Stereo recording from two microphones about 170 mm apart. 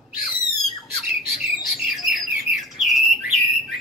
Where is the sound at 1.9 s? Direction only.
Centre (ahead or behind).